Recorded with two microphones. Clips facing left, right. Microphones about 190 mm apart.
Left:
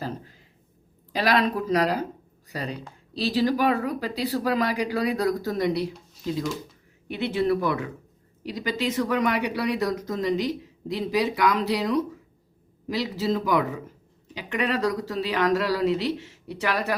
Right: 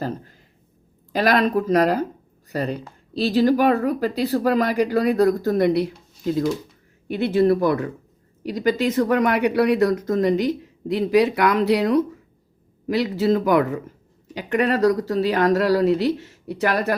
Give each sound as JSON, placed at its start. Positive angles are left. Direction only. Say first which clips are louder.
{"t": 1.1, "sound": "speech", "louder": "right 4 dB", "side_deg": -50}
{"t": 7.1, "sound": "speech", "louder": "right 6 dB", "side_deg": -45}